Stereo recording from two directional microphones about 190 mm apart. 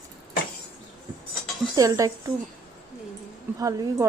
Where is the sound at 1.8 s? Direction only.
15° right (ahead or behind).